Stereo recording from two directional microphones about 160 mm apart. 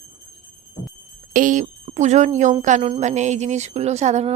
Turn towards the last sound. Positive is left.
turn(degrees=-45)  # may be behind; listen again after turning